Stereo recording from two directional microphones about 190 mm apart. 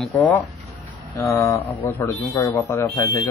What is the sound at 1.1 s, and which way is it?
Speech, 15° left (ahead or behind).